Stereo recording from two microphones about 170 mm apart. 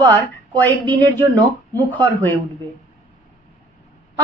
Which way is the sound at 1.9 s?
10° left (ahead or behind).